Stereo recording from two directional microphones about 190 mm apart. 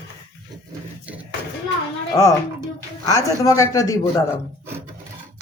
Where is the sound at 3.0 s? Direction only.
15° left (ahead or behind).